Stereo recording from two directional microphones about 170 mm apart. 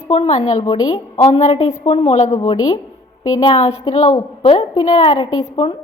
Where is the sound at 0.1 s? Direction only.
35° left (ahead or behind).